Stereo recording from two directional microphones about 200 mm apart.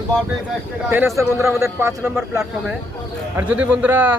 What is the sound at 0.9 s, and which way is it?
A man's voice, 10° right (ahead or behind).